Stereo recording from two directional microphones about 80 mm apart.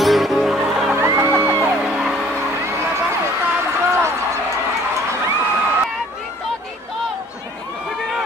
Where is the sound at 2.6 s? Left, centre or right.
Right.